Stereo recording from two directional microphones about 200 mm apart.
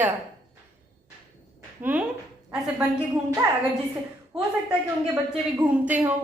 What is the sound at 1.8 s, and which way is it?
Speech, 10° right (ahead or behind).